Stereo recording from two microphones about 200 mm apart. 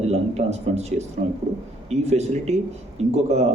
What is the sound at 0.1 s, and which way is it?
A man's voice, 30° right (ahead or behind).